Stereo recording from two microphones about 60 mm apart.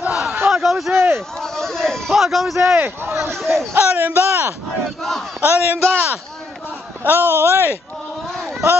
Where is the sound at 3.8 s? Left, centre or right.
Right.